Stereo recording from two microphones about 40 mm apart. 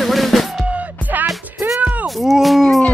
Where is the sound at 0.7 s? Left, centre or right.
Right.